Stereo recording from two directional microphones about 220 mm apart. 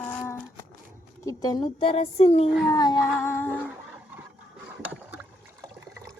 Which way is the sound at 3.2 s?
10° left (ahead or behind).